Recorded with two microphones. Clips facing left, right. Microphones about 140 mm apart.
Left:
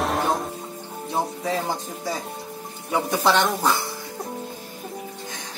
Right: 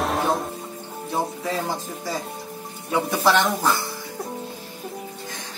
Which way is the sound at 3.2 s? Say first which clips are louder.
Right 1 dB; 20° left (ahead or behind).